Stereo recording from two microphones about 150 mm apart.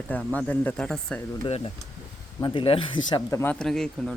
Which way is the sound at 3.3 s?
15° left (ahead or behind).